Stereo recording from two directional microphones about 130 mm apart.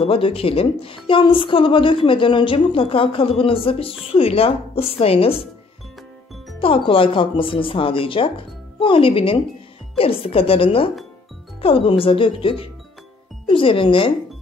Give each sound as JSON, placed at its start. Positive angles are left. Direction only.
{"t": 0.0, "sound": "a woman's voice", "side_deg": 45}
{"t": 6.6, "sound": "a woman's voice", "side_deg": 45}